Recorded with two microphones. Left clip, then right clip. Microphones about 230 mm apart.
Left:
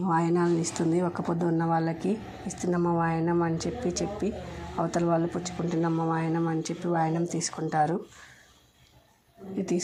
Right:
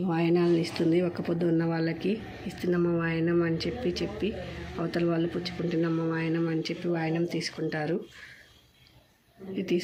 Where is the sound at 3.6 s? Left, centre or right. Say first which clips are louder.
Even; left.